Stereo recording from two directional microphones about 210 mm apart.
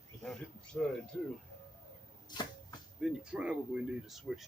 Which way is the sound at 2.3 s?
20° left (ahead or behind).